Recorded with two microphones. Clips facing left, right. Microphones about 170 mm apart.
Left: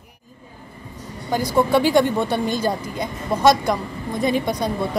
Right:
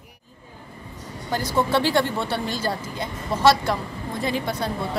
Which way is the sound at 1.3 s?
10° left (ahead or behind).